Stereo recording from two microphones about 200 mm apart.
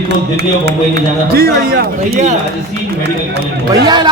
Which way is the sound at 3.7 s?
20° right (ahead or behind).